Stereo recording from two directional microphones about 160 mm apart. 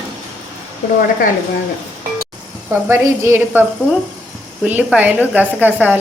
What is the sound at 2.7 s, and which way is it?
A woman's voice, 15° right (ahead or behind).